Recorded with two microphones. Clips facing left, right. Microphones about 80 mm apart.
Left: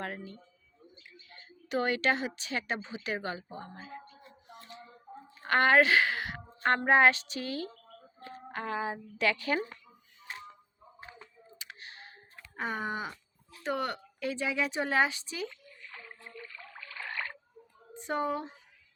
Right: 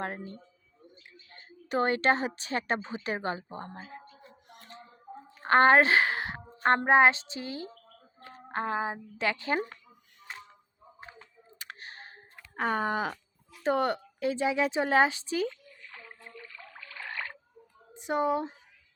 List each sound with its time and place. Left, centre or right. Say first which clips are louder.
0.0 s a woman's voice: right 3 dB; right
4.4 s a sound: left 2 dB; right
5.4 s a woman's voice: right 3 dB; right
11.6 s a sound: right 4 dB; right
12.5 s speech: right 6 dB; right
13.7 s a woman's voice: right 6 dB; right
17.9 s a woman's voice: right 4 dB; centre